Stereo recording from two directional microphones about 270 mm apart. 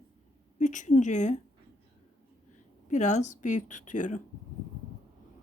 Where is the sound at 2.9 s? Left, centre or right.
Left.